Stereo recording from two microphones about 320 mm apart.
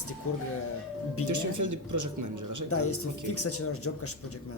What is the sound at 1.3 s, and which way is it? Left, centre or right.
Speech, right.